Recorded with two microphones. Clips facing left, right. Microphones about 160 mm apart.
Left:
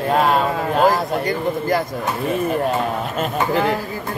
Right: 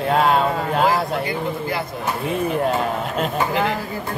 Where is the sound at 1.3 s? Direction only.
45° left (ahead or behind).